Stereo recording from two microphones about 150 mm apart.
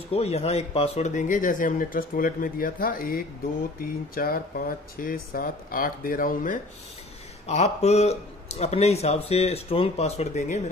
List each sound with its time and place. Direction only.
0.1 s speech: 40° left (ahead or behind); by 6.6 s 65° left (ahead or behind)
7.4 s speech: 45° left (ahead or behind)